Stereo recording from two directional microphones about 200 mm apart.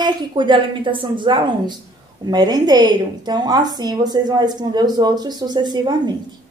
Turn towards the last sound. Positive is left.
turn(degrees=-20)  # may be behind; listen again after turning